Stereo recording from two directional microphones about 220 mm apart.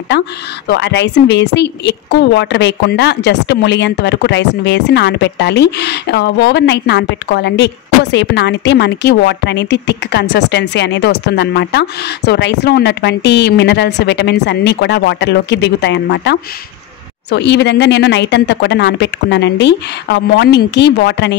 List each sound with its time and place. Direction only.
0.1 s speech: 50° left (ahead or behind)